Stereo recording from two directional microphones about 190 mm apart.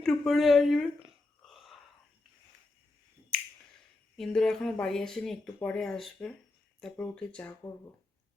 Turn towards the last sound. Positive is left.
turn(degrees=5)  # may be behind; listen again after turning